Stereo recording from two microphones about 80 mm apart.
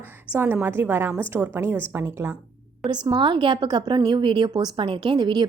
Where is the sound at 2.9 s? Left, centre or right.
Right.